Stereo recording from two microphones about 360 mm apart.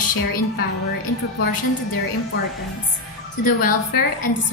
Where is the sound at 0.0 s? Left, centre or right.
Left.